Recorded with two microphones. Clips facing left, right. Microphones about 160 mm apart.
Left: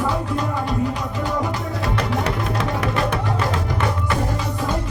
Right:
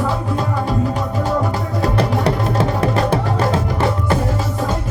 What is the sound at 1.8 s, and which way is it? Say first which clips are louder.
Music: right 6 dB; 35° right (ahead or behind).